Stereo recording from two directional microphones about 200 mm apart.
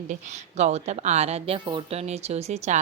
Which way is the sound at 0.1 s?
35° right (ahead or behind).